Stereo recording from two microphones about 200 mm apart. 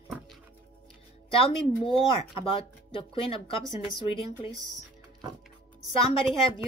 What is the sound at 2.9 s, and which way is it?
Speech, 25° left (ahead or behind).